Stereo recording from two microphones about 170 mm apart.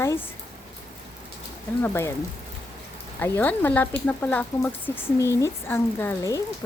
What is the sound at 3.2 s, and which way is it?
Speech, 10° left (ahead or behind).